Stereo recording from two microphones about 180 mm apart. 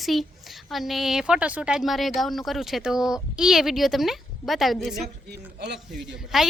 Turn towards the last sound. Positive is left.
turn(degrees=0)  # may be behind; listen again after turning